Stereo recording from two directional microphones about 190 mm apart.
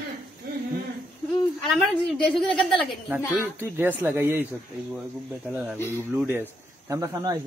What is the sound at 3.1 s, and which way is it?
Speech, 10° right (ahead or behind).